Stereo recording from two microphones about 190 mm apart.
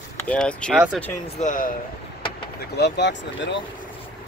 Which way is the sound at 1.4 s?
45° left (ahead or behind).